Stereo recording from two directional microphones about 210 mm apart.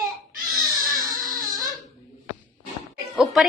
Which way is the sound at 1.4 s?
20° right (ahead or behind).